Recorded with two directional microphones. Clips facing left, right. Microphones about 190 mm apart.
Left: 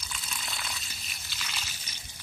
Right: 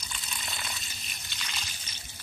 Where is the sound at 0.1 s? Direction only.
Centre (ahead or behind).